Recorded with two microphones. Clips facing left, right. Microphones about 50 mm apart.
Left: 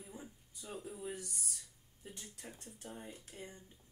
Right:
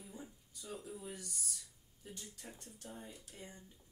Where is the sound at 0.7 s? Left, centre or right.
Centre.